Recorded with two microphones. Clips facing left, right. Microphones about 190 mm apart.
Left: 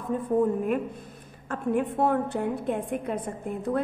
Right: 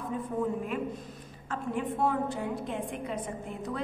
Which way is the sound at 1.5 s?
55° left (ahead or behind).